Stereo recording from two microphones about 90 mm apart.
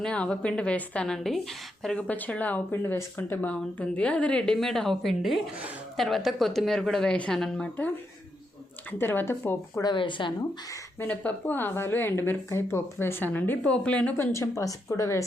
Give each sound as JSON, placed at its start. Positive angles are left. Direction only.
{"t": 0.0, "sound": "a woman's voice", "side_deg": 10}
{"t": 2.0, "sound": "a woman's voice", "side_deg": 15}
{"t": 3.5, "sound": "a woman's voice", "side_deg": 15}
{"t": 8.9, "sound": "a woman's voice", "side_deg": 25}
{"t": 9.8, "sound": "a woman's voice", "side_deg": 65}
{"t": 11.0, "sound": "a woman's voice", "side_deg": 15}
{"t": 13.7, "sound": "a woman's voice", "side_deg": 10}
{"t": 14.2, "sound": "speech", "side_deg": 30}